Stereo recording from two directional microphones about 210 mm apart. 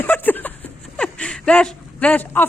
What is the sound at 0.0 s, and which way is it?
Chuckle, 10° left (ahead or behind).